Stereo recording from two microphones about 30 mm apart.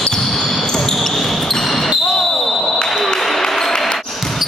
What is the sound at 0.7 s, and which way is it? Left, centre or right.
Basketball bounce, centre.